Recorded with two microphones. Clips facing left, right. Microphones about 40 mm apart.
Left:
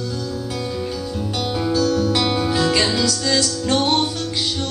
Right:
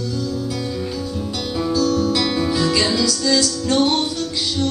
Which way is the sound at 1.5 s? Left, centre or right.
Centre.